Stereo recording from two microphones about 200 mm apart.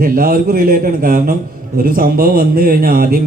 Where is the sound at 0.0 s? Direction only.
45° right (ahead or behind).